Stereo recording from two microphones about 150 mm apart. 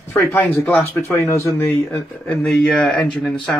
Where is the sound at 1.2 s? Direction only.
20° left (ahead or behind); by 3.4 s 5° left (ahead or behind).